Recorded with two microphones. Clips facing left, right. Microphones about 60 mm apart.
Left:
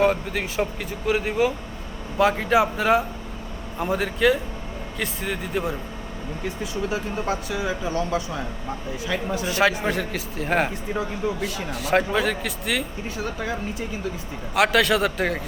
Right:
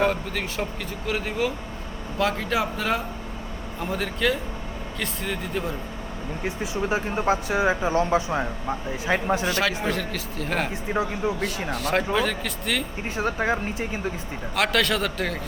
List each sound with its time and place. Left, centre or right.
0.0 s speech: centre
6.4 s speech: right
9.5 s a man's voice: centre
10.9 s speech: right
11.7 s speech: centre
13.1 s speech: right
14.5 s speech: centre